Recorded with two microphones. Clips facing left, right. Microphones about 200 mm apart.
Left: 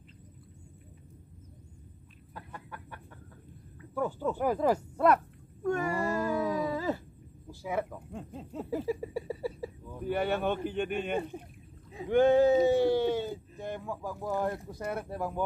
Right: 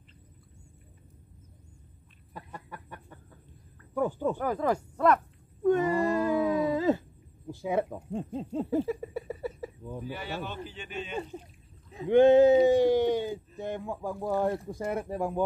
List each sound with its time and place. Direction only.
2.3 s chicken: 15° right (ahead or behind)
3.9 s speech: 15° right (ahead or behind)
4.4 s speech: 10° left (ahead or behind)
5.6 s wail: 20° right (ahead or behind)
7.4 s speech: 25° right (ahead or behind)
8.8 s speech: 10° left (ahead or behind)
10.0 s speech: 55° left (ahead or behind)
12.1 s speech: 20° right (ahead or behind)